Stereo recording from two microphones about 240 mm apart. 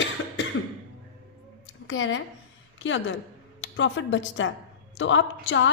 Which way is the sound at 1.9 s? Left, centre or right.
Left.